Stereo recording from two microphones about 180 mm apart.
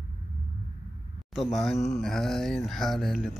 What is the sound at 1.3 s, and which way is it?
Speech, centre (ahead or behind).